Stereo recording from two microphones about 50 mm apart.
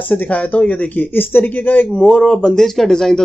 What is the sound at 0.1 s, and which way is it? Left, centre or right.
Speech, left.